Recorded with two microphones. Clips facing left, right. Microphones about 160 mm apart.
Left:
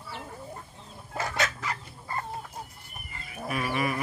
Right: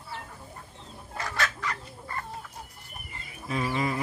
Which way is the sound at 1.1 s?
25° left (ahead or behind).